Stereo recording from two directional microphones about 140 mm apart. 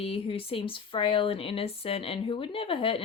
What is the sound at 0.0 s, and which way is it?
Speech, 40° left (ahead or behind).